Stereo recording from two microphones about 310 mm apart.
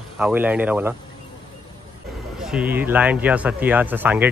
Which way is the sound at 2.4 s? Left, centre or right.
Centre.